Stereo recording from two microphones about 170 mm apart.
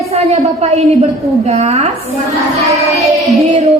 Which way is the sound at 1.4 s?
40° right (ahead or behind).